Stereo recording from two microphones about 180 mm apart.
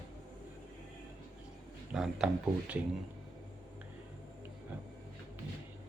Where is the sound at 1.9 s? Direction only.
5° right (ahead or behind).